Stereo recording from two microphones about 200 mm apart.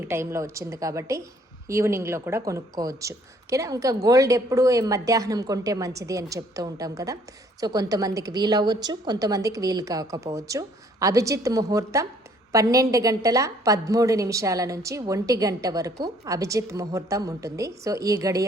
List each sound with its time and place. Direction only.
0.0 s a woman's voice: 10° right (ahead or behind)